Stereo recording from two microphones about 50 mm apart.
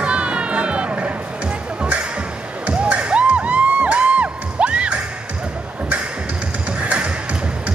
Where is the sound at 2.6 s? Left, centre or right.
Right.